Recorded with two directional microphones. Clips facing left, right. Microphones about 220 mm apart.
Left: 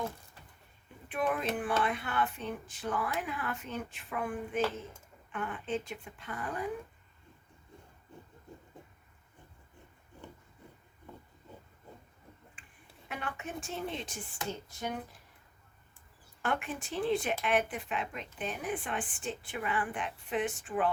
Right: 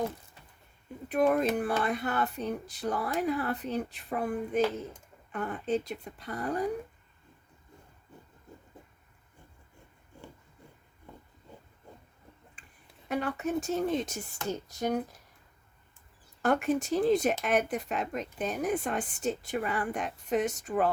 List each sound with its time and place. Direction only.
1.0 s speech: 40° right (ahead or behind)
12.6 s a sound: 40° right (ahead or behind)
13.1 s speech: 40° right (ahead or behind)
16.4 s speech: 40° right (ahead or behind)